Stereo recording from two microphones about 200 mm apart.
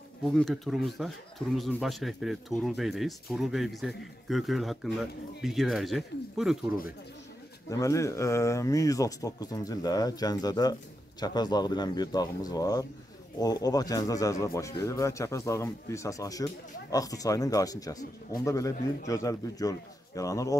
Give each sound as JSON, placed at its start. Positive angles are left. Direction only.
{"t": 0.2, "sound": "speech", "side_deg": 0}
{"t": 7.7, "sound": "speech", "side_deg": 15}